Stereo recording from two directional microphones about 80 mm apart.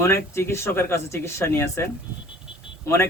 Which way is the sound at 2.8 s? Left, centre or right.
Left.